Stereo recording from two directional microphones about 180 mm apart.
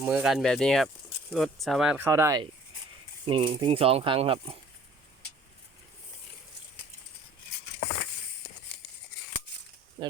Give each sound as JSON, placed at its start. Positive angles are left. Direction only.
{"t": 0.0, "sound": "speech", "side_deg": -5}
{"t": 2.0, "sound": "speech", "side_deg": -15}
{"t": 3.2, "sound": "speech", "side_deg": -30}
{"t": 10.0, "sound": "a sound", "side_deg": -30}